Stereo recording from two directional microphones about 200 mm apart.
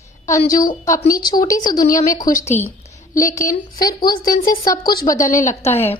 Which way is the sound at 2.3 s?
35° left (ahead or behind).